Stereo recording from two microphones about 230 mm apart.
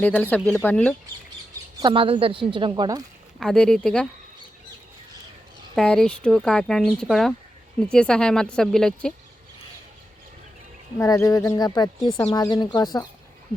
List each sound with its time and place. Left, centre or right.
0.0 s speech: centre
1.8 s a woman's voice: right
3.4 s speech: centre
5.7 s speech: centre
10.9 s speech: centre